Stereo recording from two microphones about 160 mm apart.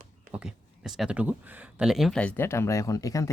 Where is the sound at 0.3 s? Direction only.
5° right (ahead or behind).